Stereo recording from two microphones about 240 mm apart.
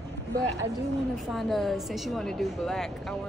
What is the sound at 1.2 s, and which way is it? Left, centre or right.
A woman's voice, centre.